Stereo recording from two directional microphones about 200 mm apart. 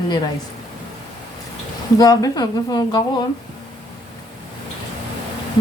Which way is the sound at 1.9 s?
20° left (ahead or behind).